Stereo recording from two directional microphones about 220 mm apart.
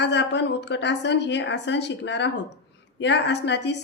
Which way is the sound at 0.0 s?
50° left (ahead or behind).